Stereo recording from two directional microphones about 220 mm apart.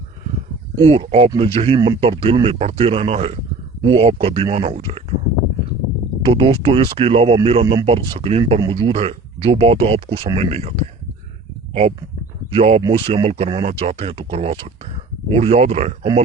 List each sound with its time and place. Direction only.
0.8 s speech: 25° right (ahead or behind)
6.2 s speech: 25° right (ahead or behind)